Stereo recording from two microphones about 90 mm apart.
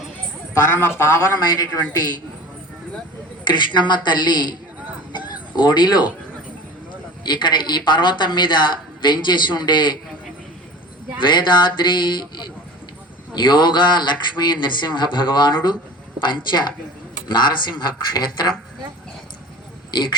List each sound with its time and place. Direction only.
0.7 s speech: 25° left (ahead or behind)
1.5 s speech: 45° left (ahead or behind)
3.5 s speech: 60° left (ahead or behind)
5.1 s a sound: 55° left (ahead or behind)
7.3 s speech: 60° left (ahead or behind)
11.3 s speech: 60° left (ahead or behind)
19.9 s speech: 55° left (ahead or behind)